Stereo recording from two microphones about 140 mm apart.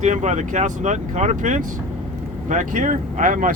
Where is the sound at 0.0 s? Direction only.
55° right (ahead or behind).